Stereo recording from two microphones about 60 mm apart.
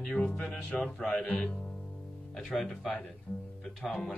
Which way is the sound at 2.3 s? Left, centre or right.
Centre.